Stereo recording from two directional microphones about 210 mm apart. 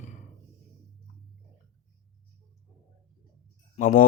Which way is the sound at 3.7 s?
40° left (ahead or behind).